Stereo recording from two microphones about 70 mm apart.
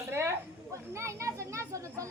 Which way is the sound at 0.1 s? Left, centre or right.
Right.